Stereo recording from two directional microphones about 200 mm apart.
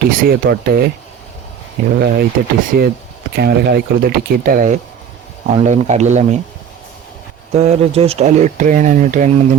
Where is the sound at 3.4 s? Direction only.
50° right (ahead or behind); by 6.3 s 35° right (ahead or behind).